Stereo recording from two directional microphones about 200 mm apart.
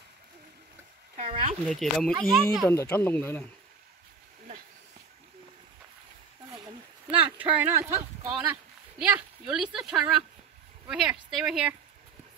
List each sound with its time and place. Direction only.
1.1 s a sound: 30° right (ahead or behind)
1.7 s speech: centre (ahead or behind)
2.7 s speech: 15° left (ahead or behind)
7.2 s speech: 10° right (ahead or behind)